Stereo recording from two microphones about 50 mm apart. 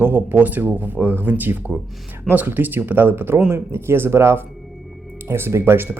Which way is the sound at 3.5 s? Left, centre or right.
Right.